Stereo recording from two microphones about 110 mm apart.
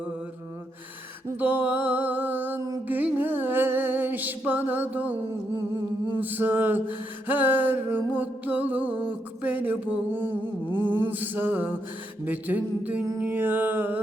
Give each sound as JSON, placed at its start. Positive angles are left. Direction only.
{"t": 1.4, "sound": "mantra", "side_deg": -15}
{"t": 2.6, "sound": "a sound", "side_deg": -30}
{"t": 2.8, "sound": "music", "side_deg": -15}
{"t": 6.1, "sound": "music", "side_deg": -15}